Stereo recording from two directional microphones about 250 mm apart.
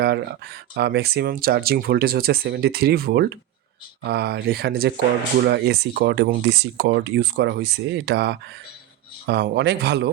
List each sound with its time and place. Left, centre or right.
0.0 s speech: right